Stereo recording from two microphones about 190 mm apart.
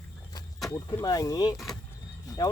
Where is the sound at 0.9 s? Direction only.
20° left (ahead or behind).